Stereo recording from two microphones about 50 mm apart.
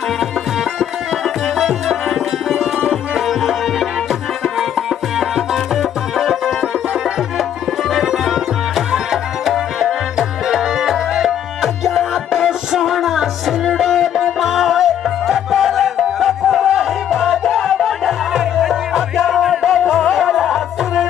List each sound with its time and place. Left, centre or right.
0.7 s music: centre